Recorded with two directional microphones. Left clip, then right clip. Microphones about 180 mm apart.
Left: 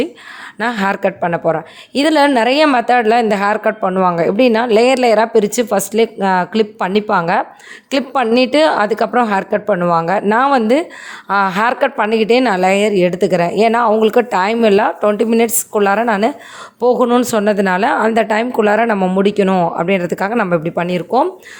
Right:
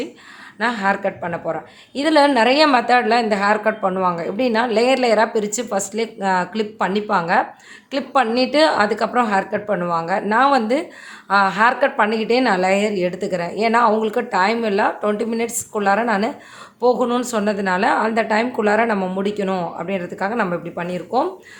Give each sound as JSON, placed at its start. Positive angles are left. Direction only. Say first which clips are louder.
{"t": 0.6, "sound": "a woman's voice", "louder": "left 3 dB", "side_deg": 50}